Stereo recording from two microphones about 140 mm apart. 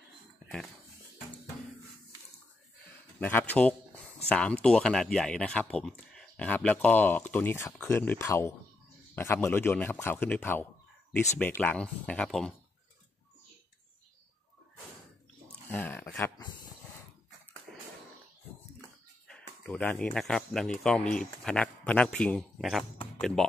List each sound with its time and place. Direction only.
3.2 s speech: 15° left (ahead or behind)
15.7 s a sound: 15° left (ahead or behind)
19.2 s speech: 5° left (ahead or behind)